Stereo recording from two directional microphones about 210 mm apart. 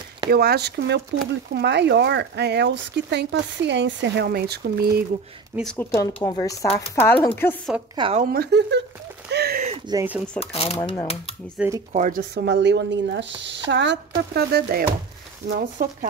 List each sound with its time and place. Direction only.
0.3 s speech: 50° right (ahead or behind)
5.6 s speech: 5° left (ahead or behind)
6.1 s speech: 20° left (ahead or behind)
7.9 s speech: 25° right (ahead or behind)
8.2 s speech: 45° right (ahead or behind)
9.3 s a sound: 50° right (ahead or behind)
9.8 s speech: 10° right (ahead or behind)
10.4 s speech: 30° left (ahead or behind)
10.8 s speech: 15° left (ahead or behind)
11.4 s speech: 5° right (ahead or behind)
11.9 s speech: 40° right (ahead or behind)